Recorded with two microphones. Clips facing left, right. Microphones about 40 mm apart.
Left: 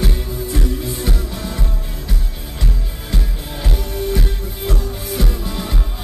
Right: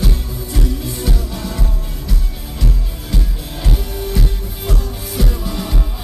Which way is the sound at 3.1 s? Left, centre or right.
Centre.